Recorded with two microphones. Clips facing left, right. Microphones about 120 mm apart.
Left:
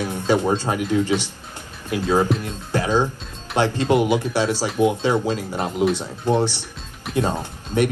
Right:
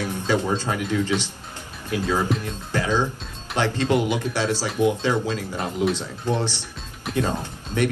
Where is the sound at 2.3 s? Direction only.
Centre (ahead or behind).